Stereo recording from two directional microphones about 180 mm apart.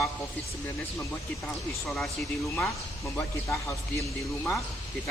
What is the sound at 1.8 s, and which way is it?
Speech, 5° left (ahead or behind).